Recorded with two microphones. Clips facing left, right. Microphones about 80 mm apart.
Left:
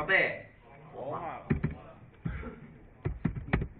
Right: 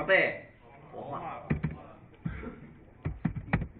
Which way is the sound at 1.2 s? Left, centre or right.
Left.